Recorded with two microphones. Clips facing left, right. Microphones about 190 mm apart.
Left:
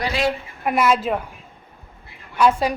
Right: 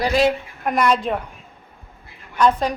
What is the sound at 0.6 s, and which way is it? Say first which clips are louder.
Speech: even; 5° left (ahead or behind).